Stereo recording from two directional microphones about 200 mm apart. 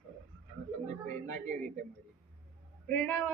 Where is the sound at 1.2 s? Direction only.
40° right (ahead or behind).